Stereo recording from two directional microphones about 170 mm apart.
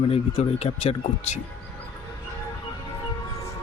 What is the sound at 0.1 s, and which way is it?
Speech, 40° left (ahead or behind).